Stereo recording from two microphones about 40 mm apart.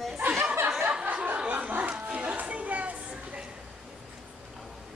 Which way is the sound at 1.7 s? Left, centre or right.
Right.